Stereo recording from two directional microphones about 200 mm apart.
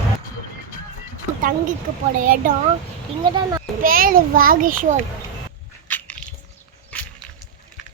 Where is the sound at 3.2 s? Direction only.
20° right (ahead or behind).